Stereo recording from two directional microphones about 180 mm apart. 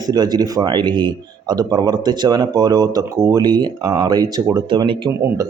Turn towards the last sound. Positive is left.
turn(degrees=-25)  # may be behind; listen again after turning